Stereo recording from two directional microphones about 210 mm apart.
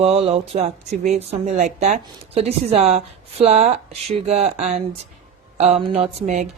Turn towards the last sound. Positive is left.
turn(degrees=-35)  # may be behind; listen again after turning